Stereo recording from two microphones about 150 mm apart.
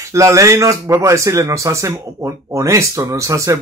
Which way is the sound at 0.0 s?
20° right (ahead or behind).